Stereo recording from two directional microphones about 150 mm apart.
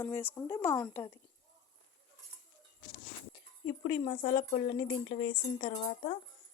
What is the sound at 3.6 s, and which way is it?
Speech, 35° left (ahead or behind).